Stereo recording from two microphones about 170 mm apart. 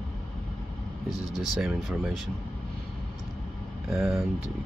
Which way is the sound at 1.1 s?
20° left (ahead or behind).